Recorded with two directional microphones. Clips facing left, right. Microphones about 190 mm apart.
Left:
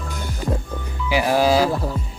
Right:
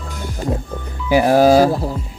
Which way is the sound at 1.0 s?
45° right (ahead or behind).